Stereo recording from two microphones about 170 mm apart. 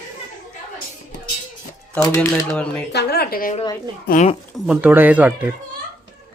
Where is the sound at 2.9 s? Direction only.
70° left (ahead or behind).